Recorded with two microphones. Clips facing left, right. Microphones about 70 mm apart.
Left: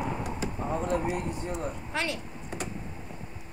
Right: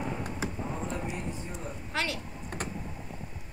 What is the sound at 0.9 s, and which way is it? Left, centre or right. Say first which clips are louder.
Speech: left 6 dB; left.